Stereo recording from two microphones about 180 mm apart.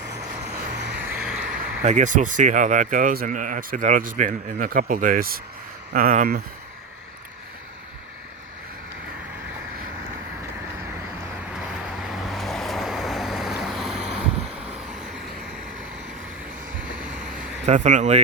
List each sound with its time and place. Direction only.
1.0 s vehicle: 5° right (ahead or behind)
1.8 s speech: 40° right (ahead or behind)
12.0 s vehicle: centre (ahead or behind)
17.3 s a sound: 40° right (ahead or behind)